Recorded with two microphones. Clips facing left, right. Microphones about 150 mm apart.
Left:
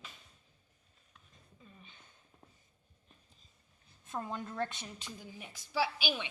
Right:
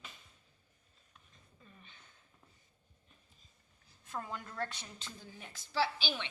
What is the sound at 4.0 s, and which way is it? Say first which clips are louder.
A woman's voice: left 3 dB; 20° left (ahead or behind).